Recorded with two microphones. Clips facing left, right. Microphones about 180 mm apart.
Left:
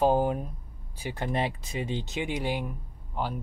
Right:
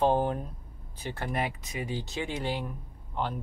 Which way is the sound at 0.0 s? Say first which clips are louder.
Left 2 dB; 10° left (ahead or behind).